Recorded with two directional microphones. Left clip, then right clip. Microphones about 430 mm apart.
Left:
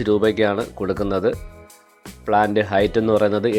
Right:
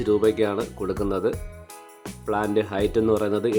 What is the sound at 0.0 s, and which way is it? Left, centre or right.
Speech, centre.